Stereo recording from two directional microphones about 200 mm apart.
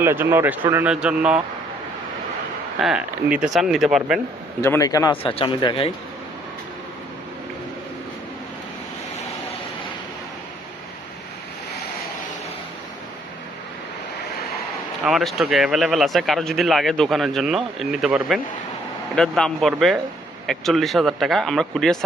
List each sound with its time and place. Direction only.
0.0 s speech: 10° right (ahead or behind)
2.8 s speech: 5° right (ahead or behind)
4.6 s speech: 15° left (ahead or behind)
5.2 s speech: 25° left (ahead or behind)
15.0 s speech: centre (ahead or behind)